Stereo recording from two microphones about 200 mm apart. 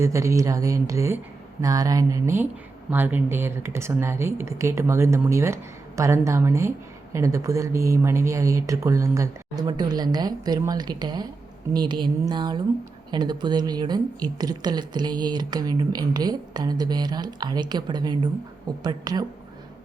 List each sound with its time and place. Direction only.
0.0 s a woman's voice: 15° right (ahead or behind)